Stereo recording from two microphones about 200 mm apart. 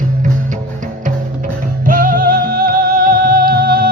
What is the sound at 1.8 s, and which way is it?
Music, 45° right (ahead or behind).